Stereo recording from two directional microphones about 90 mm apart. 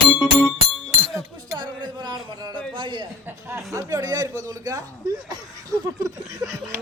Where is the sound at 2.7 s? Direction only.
60° right (ahead or behind).